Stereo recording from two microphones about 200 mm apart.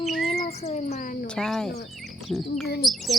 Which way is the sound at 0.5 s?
35° left (ahead or behind).